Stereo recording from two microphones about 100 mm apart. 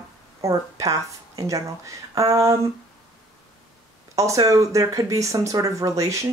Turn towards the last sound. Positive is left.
turn(degrees=-30)  # may be behind; listen again after turning